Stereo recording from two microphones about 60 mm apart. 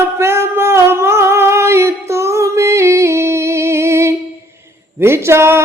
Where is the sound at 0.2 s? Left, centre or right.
Right.